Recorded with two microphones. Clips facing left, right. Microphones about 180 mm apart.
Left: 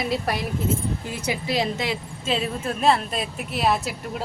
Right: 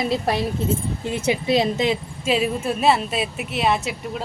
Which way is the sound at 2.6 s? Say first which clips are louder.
Left 1 dB; 5° right (ahead or behind).